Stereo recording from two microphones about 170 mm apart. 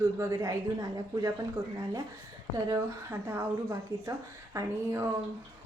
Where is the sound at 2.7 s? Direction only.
15° right (ahead or behind).